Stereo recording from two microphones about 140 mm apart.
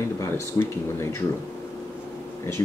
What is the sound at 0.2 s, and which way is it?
Speech, 20° left (ahead or behind).